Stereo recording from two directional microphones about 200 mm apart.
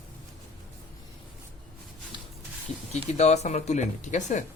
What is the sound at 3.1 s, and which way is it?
Speech, 35° left (ahead or behind).